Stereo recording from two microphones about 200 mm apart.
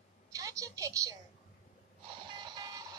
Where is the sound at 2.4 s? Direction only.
20° right (ahead or behind).